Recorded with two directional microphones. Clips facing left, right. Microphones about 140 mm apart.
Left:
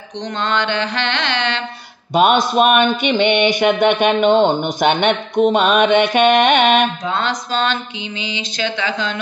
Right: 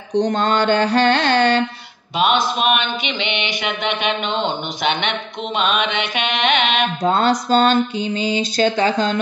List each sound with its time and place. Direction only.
0.2 s mantra: 45° right (ahead or behind)
2.1 s speech: 45° left (ahead or behind)
7.1 s a sound: 40° right (ahead or behind)